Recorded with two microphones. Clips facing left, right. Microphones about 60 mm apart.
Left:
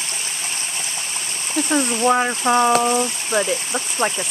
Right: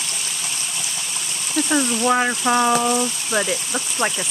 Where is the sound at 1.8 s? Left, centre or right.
Left.